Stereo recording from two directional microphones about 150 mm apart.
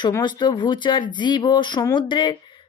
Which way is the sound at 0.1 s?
30° left (ahead or behind).